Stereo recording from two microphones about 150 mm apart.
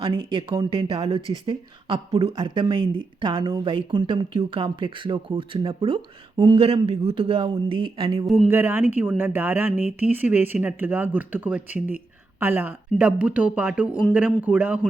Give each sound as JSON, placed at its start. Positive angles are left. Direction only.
{"t": 0.0, "sound": "speech", "side_deg": -35}
{"t": 8.4, "sound": "speech", "side_deg": -15}